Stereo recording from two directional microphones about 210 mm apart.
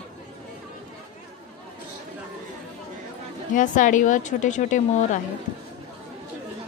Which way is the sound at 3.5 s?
35° left (ahead or behind).